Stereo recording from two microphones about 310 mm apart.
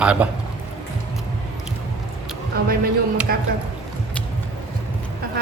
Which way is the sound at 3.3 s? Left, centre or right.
Right.